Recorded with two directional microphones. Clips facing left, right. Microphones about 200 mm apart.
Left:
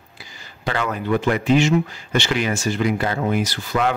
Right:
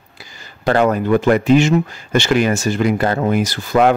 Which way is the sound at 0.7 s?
45° right (ahead or behind).